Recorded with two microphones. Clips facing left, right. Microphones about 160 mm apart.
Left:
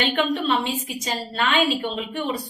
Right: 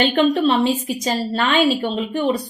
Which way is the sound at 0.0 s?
35° right (ahead or behind).